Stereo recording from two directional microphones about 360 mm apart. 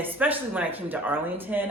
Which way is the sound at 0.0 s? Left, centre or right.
Centre.